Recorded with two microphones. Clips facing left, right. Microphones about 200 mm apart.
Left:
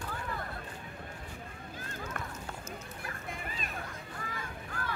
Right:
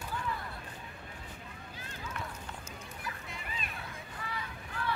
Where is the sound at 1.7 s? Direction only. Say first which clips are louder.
Left 2 dB; 50° left (ahead or behind).